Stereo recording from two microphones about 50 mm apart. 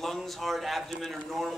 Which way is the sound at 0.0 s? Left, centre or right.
Centre.